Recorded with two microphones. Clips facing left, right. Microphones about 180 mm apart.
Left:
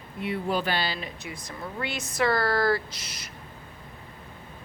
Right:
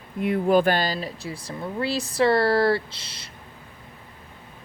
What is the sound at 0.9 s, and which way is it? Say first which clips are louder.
Speech: right 5 dB; 30° right (ahead or behind).